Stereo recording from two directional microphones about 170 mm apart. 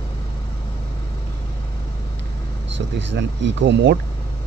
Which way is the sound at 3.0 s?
90° right.